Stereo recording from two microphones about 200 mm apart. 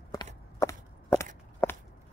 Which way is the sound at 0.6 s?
15° left (ahead or behind).